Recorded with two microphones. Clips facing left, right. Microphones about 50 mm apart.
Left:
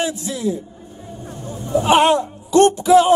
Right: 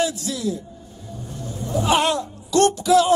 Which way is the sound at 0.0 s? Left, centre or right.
Left.